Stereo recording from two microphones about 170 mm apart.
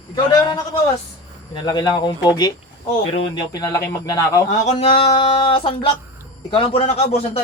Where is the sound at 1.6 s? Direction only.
25° left (ahead or behind).